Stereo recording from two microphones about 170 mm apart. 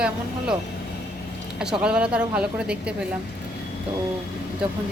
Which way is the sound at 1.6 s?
5° right (ahead or behind).